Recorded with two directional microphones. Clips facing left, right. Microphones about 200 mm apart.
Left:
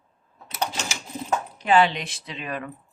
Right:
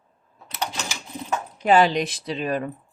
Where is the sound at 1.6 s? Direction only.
40° right (ahead or behind).